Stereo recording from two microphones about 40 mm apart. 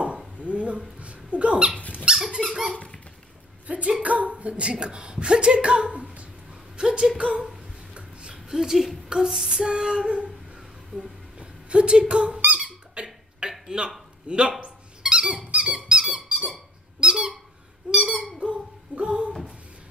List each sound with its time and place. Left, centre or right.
0.4 s a sound: right
1.8 s squeak: left
3.6 s a woman's voice: right
7.9 s a sound: right
8.5 s a woman's voice: centre
12.5 s squeak: right
14.2 s a man's voice: right
14.6 s squeak: right
18.4 s a sound: right